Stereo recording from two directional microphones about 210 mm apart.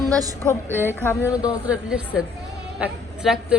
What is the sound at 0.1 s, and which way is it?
Speech, 15° right (ahead or behind).